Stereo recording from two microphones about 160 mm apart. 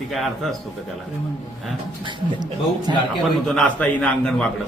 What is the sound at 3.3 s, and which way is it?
A man's voice, 5° left (ahead or behind).